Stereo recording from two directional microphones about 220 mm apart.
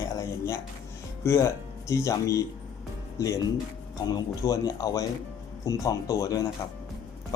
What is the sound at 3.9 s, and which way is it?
Speech, 15° left (ahead or behind).